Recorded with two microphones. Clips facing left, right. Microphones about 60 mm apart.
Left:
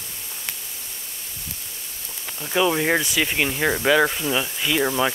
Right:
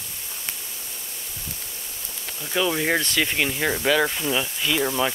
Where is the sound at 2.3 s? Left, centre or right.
Centre.